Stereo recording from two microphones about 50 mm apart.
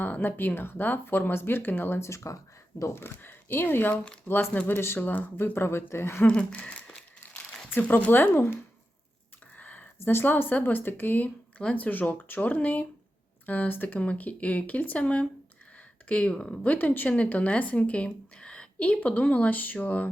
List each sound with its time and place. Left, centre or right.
0.0 s speech: left
2.0 s speech: left
2.9 s speech: left
4.3 s speech: left
4.6 s speech: left
5.5 s speech: left
6.2 s speech: left
8.3 s speech: left
9.6 s a sound: left
10.0 s speech: left
10.2 s speech: left
14.0 s speech: left
16.7 s a woman's voice: left